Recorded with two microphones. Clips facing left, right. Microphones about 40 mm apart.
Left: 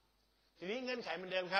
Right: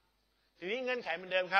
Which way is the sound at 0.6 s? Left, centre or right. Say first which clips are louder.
Right 5 dB; right.